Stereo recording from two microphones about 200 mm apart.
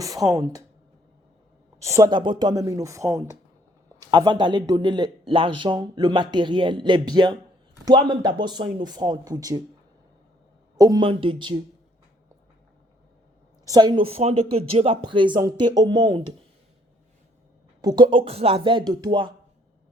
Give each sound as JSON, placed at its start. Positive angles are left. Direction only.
{"t": 0.0, "sound": "speech", "side_deg": -15}
{"t": 1.8, "sound": "a man's voice", "side_deg": -15}
{"t": 10.8, "sound": "a man's voice", "side_deg": -20}
{"t": 13.7, "sound": "a man's voice", "side_deg": -20}
{"t": 17.8, "sound": "a man's voice", "side_deg": -25}